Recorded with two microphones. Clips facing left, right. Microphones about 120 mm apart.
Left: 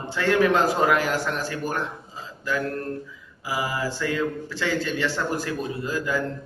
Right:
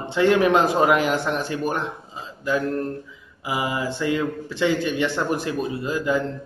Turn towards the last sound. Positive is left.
turn(degrees=-20)  # may be behind; listen again after turning